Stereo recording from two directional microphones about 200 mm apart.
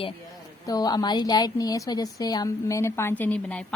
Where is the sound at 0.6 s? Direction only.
20° left (ahead or behind).